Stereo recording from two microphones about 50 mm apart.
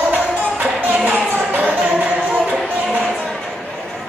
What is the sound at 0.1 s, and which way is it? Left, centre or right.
Music, right.